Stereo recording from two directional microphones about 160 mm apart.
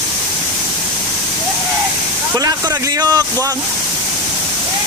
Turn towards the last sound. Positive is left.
turn(degrees=-25)  # may be behind; listen again after turning